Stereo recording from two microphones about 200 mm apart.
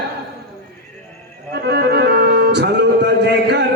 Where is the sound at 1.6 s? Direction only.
55° right (ahead or behind).